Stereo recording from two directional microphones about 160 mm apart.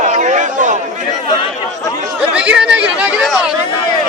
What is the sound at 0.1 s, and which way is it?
Chatter, 50° right (ahead or behind).